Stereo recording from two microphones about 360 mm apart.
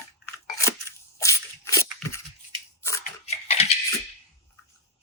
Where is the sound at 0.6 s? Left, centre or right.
Centre.